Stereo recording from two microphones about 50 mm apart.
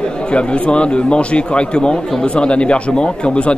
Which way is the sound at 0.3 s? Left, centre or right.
Left.